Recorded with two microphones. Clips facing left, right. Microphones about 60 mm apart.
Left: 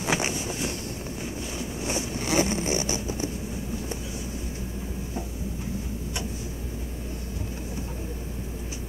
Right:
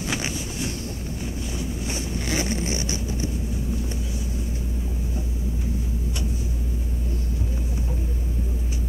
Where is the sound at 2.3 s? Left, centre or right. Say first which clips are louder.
Left 3 dB; left.